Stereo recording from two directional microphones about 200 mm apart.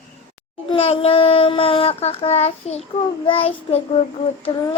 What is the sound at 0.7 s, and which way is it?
Child singing, 30° left (ahead or behind).